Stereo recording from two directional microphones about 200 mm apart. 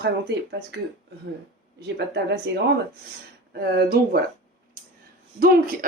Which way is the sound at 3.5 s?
50° right (ahead or behind).